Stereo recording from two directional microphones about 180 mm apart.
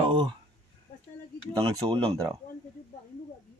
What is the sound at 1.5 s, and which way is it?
Speech, 25° right (ahead or behind).